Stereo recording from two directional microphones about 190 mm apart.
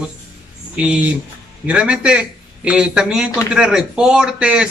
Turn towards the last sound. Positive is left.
turn(degrees=-5)  # may be behind; listen again after turning